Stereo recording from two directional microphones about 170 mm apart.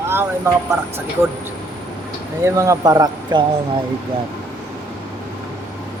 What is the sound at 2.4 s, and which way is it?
Speech, 20° right (ahead or behind).